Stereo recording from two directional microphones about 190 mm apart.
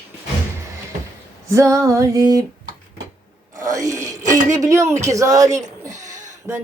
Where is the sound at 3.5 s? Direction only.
15° right (ahead or behind).